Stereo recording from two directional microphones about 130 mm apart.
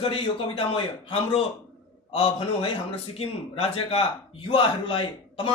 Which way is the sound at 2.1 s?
40° left (ahead or behind).